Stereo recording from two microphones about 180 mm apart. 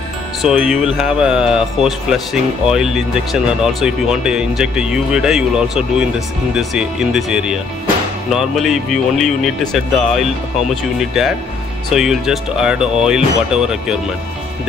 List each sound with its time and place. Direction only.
0.4 s speech: 5° right (ahead or behind)